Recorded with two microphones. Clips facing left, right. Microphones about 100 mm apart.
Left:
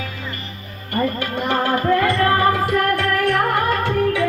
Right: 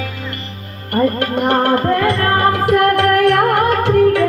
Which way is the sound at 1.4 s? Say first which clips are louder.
Right 5 dB; 65° right (ahead or behind).